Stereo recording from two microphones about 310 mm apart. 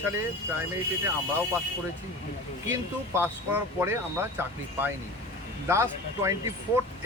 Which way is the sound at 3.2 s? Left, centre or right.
Centre.